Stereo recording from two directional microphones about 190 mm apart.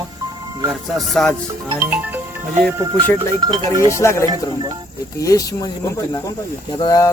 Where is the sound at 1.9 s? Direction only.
10° right (ahead or behind).